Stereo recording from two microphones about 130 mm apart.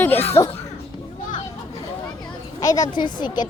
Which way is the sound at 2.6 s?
30° left (ahead or behind).